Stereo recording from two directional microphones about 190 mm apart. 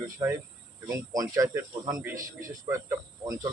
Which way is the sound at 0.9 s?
15° right (ahead or behind).